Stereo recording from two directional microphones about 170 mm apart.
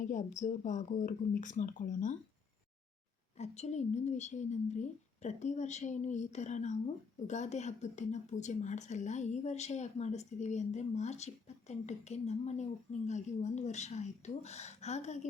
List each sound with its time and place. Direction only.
0.0 s speech: 45° left (ahead or behind)
3.3 s speech: 40° left (ahead or behind)